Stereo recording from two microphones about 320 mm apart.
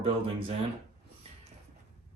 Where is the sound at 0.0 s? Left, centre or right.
Centre.